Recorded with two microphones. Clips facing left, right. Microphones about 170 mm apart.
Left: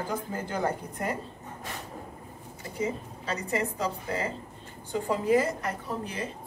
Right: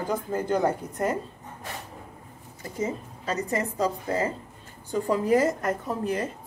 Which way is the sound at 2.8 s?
40° right (ahead or behind).